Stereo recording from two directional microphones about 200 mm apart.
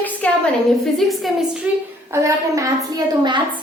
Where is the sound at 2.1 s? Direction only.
15° right (ahead or behind).